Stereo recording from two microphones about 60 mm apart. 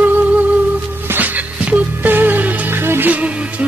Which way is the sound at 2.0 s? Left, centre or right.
Right.